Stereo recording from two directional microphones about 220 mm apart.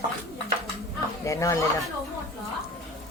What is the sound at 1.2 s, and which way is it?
Speech, 15° left (ahead or behind).